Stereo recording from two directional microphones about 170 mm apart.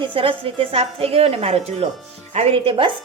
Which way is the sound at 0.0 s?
30° right (ahead or behind).